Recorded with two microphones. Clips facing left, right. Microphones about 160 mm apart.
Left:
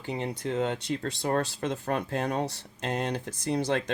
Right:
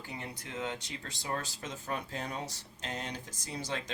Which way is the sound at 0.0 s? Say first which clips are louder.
Left 11 dB; 65° left (ahead or behind).